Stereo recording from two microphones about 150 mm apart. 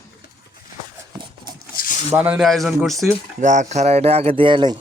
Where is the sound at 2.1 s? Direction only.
10° right (ahead or behind).